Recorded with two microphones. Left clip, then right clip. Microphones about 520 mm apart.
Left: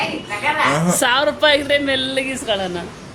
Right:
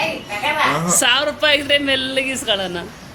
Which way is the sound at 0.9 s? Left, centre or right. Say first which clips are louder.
Even; right.